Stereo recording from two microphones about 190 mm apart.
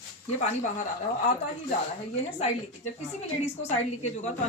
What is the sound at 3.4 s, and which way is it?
Speech, 35° left (ahead or behind).